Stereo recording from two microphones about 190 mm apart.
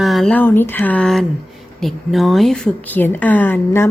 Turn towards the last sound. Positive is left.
turn(degrees=10)  # may be behind; listen again after turning